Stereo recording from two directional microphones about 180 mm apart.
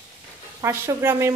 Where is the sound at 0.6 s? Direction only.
15° right (ahead or behind).